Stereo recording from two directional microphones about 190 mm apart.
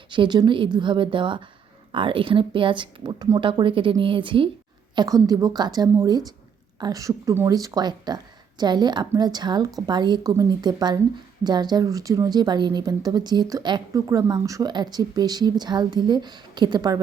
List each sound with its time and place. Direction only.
0.1 s speech: 25° right (ahead or behind)